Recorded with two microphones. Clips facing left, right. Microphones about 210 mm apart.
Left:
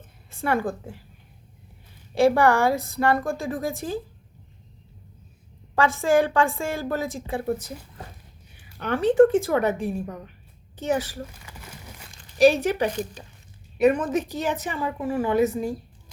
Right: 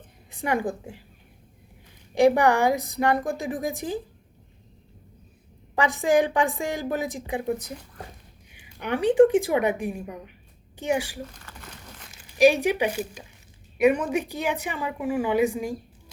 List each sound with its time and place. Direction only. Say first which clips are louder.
0.3 s a woman's voice: left 1 dB; 15° right (ahead or behind)
2.1 s a woman's voice: even; 15° right (ahead or behind)
5.7 s a woman's voice: left 1 dB; 15° right (ahead or behind)
11.3 s a sound: left 1 dB; 10° left (ahead or behind)
12.1 s a woman's voice: left 1 dB; 10° right (ahead or behind)